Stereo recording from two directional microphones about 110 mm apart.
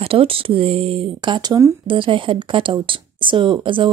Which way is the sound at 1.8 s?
50° right (ahead or behind).